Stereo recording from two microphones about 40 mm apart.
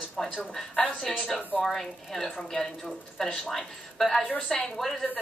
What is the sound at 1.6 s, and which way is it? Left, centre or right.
A woman's voice, centre.